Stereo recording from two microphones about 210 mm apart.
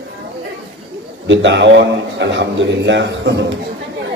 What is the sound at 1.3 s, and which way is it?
A man's voice, 60° right (ahead or behind).